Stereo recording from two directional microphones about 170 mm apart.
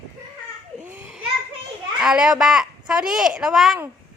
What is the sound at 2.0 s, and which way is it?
Speech, 5° right (ahead or behind).